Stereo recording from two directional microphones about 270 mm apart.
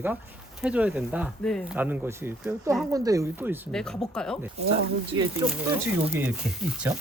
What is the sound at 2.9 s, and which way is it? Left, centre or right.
Speech, centre.